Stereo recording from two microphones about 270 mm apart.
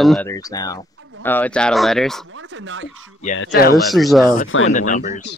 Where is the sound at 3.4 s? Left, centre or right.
Left.